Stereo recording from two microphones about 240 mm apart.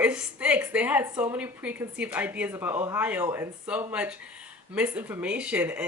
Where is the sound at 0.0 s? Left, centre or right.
Centre.